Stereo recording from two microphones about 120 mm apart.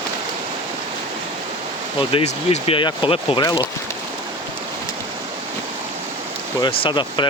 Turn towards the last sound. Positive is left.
turn(degrees=40)  # may be behind; listen again after turning